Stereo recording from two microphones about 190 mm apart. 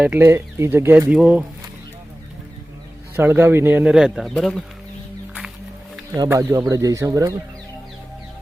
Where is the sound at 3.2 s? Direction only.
10° right (ahead or behind).